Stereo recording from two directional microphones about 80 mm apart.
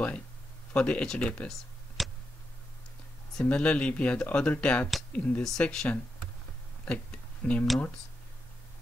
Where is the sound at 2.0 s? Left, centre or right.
Centre.